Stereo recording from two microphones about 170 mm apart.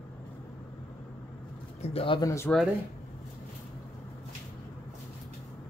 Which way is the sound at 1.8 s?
35° left (ahead or behind).